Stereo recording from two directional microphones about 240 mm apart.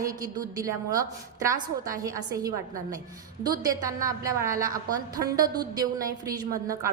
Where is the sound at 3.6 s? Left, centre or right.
Centre.